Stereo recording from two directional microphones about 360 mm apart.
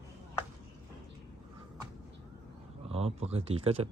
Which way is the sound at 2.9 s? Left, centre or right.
Centre.